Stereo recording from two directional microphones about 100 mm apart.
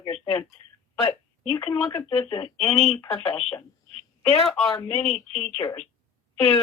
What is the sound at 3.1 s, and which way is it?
Speech, 10° left (ahead or behind).